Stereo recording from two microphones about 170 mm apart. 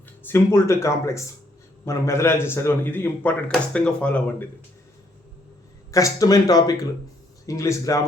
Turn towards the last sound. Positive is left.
turn(degrees=20)  # may be behind; listen again after turning